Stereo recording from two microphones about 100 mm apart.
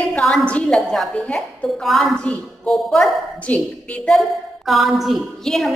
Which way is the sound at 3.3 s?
15° left (ahead or behind).